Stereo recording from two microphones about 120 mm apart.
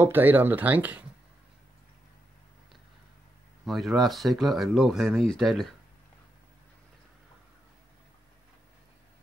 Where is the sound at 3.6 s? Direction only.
Centre (ahead or behind).